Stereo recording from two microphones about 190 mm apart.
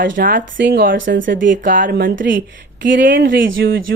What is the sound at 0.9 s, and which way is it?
Speech, 80° right.